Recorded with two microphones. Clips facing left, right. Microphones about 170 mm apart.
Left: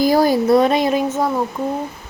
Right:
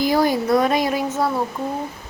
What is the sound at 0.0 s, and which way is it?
Speech, 35° left (ahead or behind).